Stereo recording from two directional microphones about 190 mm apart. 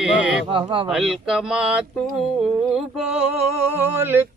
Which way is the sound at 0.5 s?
25° right (ahead or behind).